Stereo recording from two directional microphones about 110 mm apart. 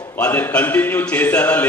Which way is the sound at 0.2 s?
15° left (ahead or behind).